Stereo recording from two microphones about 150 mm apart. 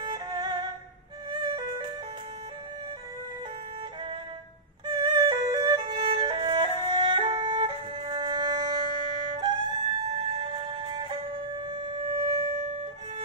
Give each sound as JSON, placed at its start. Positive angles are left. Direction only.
{"t": 0.0, "sound": "music", "side_deg": -30}
{"t": 4.8, "sound": "music", "side_deg": -30}